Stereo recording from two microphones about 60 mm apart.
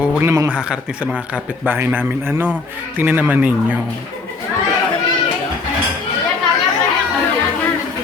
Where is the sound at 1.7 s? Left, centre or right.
Right.